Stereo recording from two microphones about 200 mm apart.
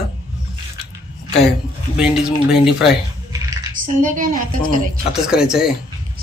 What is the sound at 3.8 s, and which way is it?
Speech, 40° right (ahead or behind).